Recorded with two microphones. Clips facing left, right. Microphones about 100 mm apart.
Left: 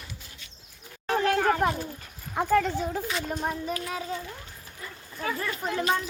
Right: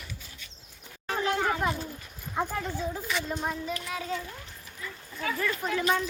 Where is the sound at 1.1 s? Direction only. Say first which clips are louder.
Left 4 dB; 55° left (ahead or behind).